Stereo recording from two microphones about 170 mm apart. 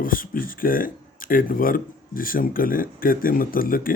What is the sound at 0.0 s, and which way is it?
Speech, 55° left (ahead or behind).